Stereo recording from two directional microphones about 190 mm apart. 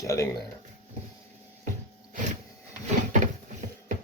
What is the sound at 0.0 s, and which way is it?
Speech, 15° left (ahead or behind).